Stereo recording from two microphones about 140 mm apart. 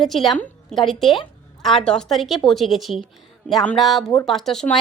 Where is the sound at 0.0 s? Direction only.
Centre (ahead or behind).